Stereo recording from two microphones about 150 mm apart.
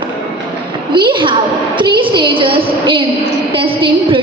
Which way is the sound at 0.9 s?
35° right (ahead or behind).